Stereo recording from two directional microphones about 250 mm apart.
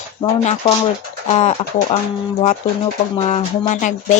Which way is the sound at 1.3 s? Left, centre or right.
Left.